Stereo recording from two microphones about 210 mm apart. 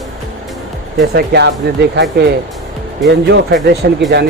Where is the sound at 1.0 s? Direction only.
50° right (ahead or behind).